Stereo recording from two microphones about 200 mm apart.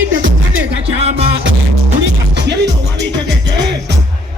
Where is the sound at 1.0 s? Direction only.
30° right (ahead or behind).